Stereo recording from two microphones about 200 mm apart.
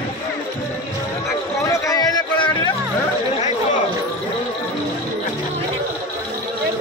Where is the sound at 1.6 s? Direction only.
15° left (ahead or behind).